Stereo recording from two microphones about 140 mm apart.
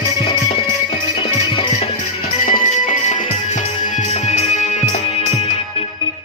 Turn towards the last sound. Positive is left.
turn(degrees=55)  # may be behind; listen again after turning